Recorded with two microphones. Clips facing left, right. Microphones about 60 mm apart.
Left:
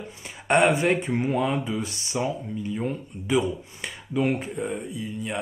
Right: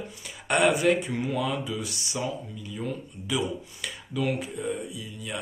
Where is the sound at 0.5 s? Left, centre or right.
Left.